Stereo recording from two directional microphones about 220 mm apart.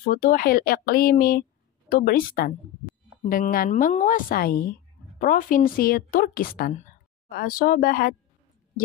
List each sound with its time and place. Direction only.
0.1 s a woman's voice: 40° left (ahead or behind)